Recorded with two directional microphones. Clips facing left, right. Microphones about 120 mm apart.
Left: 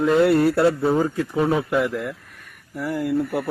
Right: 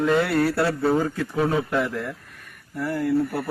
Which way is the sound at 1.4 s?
10° left (ahead or behind).